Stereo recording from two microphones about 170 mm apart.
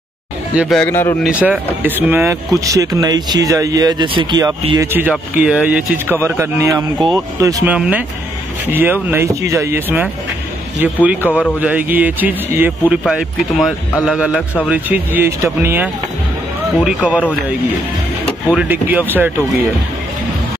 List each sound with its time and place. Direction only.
0.6 s speech: centre (ahead or behind)
0.8 s speech: 15° left (ahead or behind)
1.2 s speech: 5° right (ahead or behind); by 4.6 s 25° right (ahead or behind)
4.7 s speech: 10° right (ahead or behind)
7.7 s speech: 5° right (ahead or behind)
13.0 s speech: centre (ahead or behind)
18.5 s speech: 10° right (ahead or behind)